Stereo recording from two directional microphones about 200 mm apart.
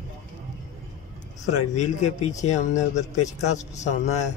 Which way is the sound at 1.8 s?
35° left (ahead or behind).